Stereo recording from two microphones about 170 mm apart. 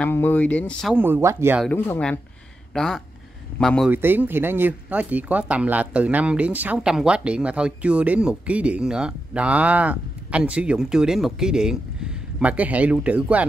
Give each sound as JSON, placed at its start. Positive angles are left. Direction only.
{"t": 0.0, "sound": "speech", "side_deg": 10}
{"t": 0.9, "sound": "speech", "side_deg": -10}
{"t": 1.7, "sound": "speech", "side_deg": 5}
{"t": 3.9, "sound": "speech", "side_deg": -10}